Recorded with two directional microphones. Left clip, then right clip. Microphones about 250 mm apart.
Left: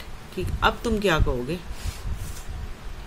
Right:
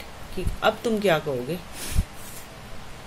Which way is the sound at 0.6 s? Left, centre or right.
Left.